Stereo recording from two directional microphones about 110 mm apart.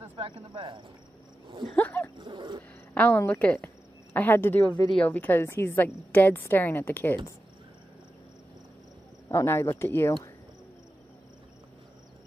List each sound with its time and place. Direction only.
0.1 s speech: 50° right (ahead or behind)
1.8 s a woman's voice: 15° left (ahead or behind)
2.1 s speech: 45° right (ahead or behind)
2.9 s a woman's voice: 15° left (ahead or behind)
4.8 s a woman's voice: 5° left (ahead or behind)
5.1 s a woman's voice: 20° left (ahead or behind)
9.3 s speech: 25° left (ahead or behind)